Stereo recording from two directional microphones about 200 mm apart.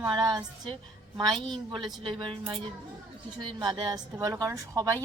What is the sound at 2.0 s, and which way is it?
A woman's voice, 25° right (ahead or behind).